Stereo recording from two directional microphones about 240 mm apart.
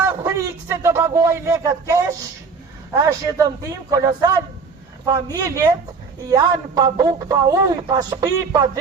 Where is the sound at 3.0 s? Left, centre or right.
Centre.